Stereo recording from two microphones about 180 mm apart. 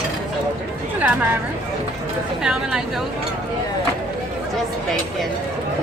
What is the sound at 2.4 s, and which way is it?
Speech, 5° right (ahead or behind).